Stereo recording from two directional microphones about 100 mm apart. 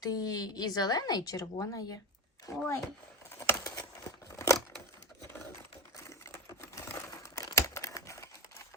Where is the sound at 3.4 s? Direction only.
35° left (ahead or behind).